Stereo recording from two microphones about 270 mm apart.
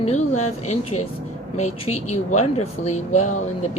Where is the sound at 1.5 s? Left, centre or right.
Left.